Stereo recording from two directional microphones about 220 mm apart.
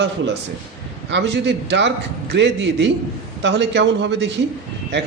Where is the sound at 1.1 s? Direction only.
50° right (ahead or behind).